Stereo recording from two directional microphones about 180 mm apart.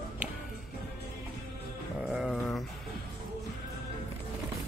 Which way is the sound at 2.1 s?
Centre (ahead or behind).